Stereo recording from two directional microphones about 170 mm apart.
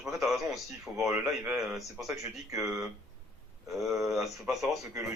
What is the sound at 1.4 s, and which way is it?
Speech, 10° right (ahead or behind).